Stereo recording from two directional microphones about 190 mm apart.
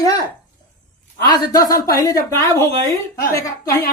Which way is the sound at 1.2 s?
20° left (ahead or behind).